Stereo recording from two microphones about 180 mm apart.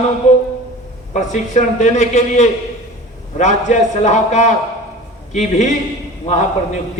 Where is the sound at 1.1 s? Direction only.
40° left (ahead or behind).